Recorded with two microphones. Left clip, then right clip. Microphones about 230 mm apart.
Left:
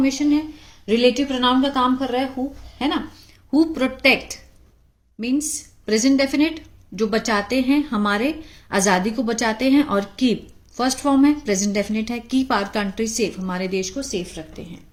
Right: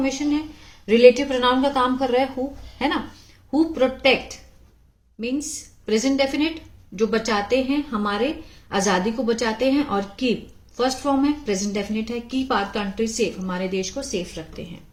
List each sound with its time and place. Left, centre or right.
0.0 s a woman's voice: left
3.5 s a woman's voice: left
5.8 s a woman's voice: left